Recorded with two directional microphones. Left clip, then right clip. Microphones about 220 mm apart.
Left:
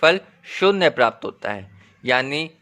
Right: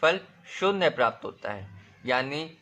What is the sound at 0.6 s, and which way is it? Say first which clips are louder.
A man's voice: left 7 dB; 35° left (ahead or behind).